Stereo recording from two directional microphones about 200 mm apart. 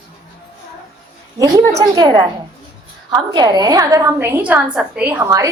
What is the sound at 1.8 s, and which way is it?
A woman's voice, 20° right (ahead or behind).